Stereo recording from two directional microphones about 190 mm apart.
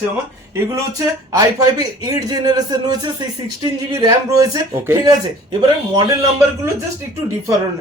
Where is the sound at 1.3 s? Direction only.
20° right (ahead or behind).